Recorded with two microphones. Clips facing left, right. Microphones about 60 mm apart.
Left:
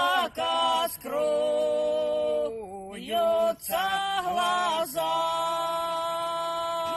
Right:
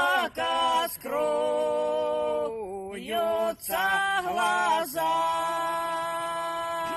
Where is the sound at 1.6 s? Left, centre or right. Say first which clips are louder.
Left 1 dB; right.